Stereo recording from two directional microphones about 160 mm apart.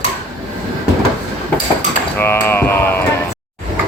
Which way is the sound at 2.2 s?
15° left (ahead or behind).